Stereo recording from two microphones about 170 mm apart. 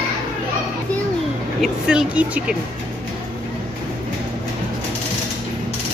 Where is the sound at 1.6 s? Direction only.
5° right (ahead or behind).